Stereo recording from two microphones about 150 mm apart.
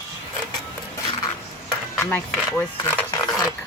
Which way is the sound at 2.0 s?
15° left (ahead or behind).